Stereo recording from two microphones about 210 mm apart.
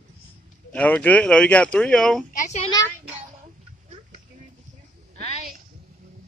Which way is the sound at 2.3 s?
35° left (ahead or behind).